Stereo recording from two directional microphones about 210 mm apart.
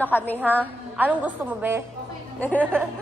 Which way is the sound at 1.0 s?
10° right (ahead or behind).